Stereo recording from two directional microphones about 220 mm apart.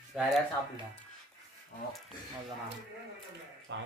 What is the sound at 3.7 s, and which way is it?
Speech, 55° right (ahead or behind).